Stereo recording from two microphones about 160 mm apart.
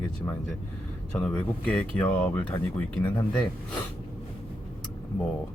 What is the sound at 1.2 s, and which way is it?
Speech, 5° left (ahead or behind).